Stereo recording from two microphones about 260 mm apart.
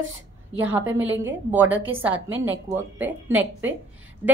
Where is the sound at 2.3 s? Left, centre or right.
Right.